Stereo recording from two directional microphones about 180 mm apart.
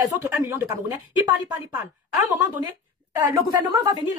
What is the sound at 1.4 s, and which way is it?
Speech, 20° right (ahead or behind).